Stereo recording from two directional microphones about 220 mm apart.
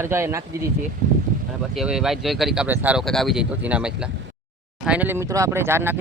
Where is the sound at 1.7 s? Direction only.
Centre (ahead or behind).